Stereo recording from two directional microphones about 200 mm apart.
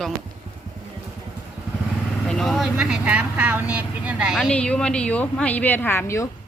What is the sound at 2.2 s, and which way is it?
Speech, centre (ahead or behind).